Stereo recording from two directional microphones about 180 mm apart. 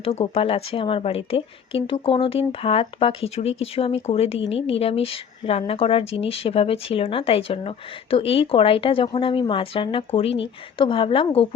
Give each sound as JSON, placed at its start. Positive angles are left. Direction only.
{"t": 0.0, "sound": "a woman's voice", "side_deg": 30}